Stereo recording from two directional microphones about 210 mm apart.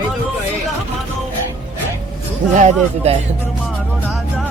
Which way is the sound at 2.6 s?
30° right (ahead or behind).